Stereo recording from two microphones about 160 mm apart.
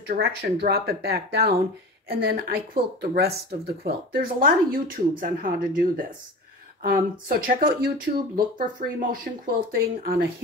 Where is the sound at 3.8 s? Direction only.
75° right (ahead or behind).